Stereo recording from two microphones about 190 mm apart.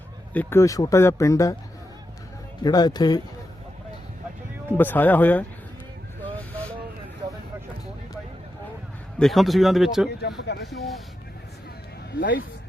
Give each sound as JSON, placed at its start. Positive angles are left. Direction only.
{"t": 0.3, "sound": "speech", "side_deg": 15}
{"t": 2.6, "sound": "speech", "side_deg": 20}
{"t": 4.8, "sound": "speech", "side_deg": 10}
{"t": 9.1, "sound": "speech", "side_deg": 0}
{"t": 10.1, "sound": "speech", "side_deg": 60}